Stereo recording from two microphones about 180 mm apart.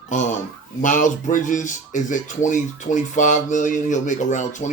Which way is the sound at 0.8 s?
45° left (ahead or behind).